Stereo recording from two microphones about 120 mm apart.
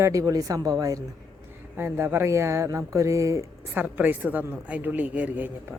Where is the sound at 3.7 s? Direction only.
15° right (ahead or behind).